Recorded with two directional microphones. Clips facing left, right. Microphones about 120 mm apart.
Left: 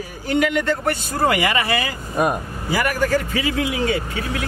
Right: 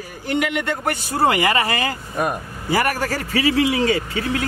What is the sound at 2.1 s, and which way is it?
Speech, 15° left (ahead or behind).